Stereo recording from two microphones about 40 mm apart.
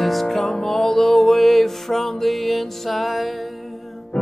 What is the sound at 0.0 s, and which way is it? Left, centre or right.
Music, centre.